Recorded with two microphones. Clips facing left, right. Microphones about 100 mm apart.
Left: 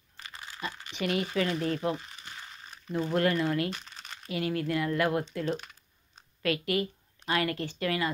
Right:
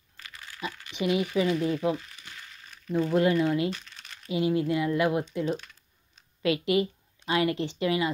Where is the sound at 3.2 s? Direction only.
20° right (ahead or behind).